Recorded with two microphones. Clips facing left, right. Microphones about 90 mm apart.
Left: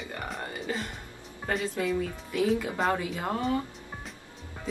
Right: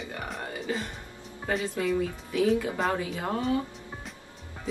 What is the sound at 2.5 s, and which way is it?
A woman's voice, centre (ahead or behind).